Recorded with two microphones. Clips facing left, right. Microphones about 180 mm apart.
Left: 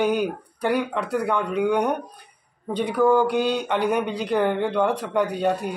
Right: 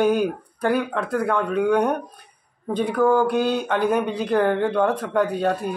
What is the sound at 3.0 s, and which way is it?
Speech, 5° right (ahead or behind).